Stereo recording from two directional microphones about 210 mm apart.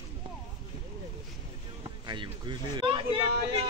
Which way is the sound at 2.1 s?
20° right (ahead or behind).